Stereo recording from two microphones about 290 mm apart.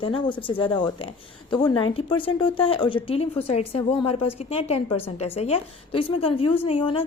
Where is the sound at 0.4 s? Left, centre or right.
Centre.